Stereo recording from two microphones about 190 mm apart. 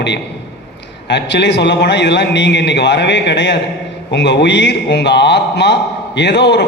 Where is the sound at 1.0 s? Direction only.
65° left (ahead or behind).